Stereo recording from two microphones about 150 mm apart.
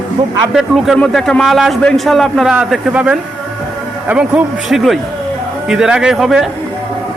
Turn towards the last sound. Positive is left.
turn(degrees=0)  # may be behind; listen again after turning